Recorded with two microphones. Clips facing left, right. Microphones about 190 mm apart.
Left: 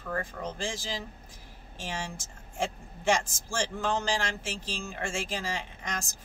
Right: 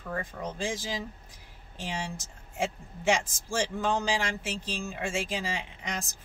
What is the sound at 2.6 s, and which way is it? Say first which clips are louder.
Speech: right 1 dB; 15° right (ahead or behind).